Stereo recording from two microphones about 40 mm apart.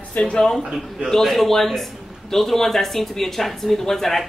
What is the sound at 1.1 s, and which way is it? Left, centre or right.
Speech, centre.